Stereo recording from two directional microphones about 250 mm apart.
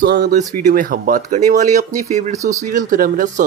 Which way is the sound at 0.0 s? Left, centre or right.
Right.